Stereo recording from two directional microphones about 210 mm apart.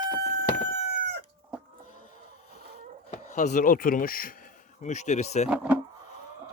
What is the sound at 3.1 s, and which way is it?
Speech, 35° left (ahead or behind).